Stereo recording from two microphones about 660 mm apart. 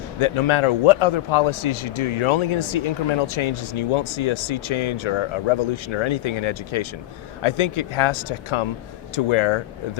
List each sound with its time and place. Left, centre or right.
0.2 s a man's voice: left